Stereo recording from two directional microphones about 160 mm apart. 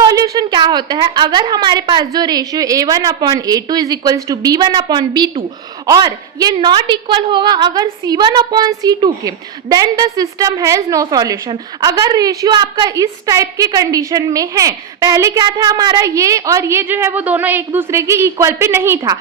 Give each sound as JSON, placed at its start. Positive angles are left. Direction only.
{"t": 0.0, "sound": "a woman's voice", "side_deg": -25}